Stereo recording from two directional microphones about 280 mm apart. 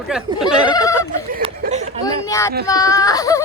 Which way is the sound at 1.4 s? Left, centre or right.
Right.